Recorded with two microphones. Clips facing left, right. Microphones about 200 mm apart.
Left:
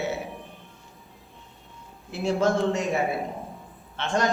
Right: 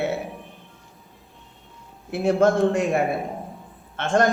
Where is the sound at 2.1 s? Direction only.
55° right (ahead or behind).